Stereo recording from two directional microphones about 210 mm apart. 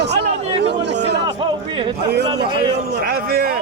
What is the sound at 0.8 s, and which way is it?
Chatter, 55° right (ahead or behind).